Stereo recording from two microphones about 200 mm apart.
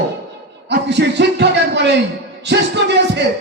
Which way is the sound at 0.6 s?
60° right (ahead or behind).